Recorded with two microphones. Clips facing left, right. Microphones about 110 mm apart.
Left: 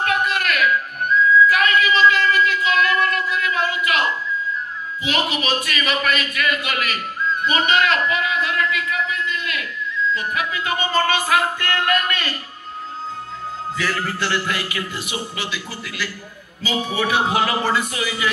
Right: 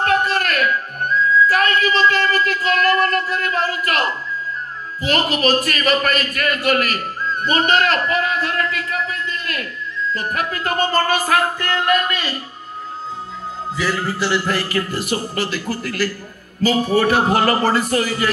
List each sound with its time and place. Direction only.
0.0 s music: 35° right (ahead or behind)
5.0 s a man's voice: 45° right (ahead or behind)
13.8 s a man's voice: 20° right (ahead or behind)
14.4 s speech: 40° right (ahead or behind)